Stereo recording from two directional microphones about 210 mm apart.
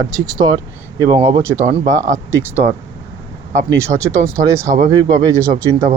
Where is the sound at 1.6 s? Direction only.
30° right (ahead or behind).